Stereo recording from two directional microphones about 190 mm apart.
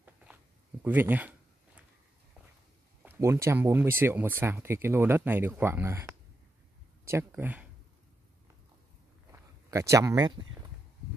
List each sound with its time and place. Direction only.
0.8 s speech: 10° right (ahead or behind)
3.0 s speech: 10° right (ahead or behind)
9.3 s speech: 15° right (ahead or behind)